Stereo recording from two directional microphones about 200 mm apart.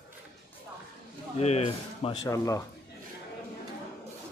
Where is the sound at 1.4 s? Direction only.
30° left (ahead or behind).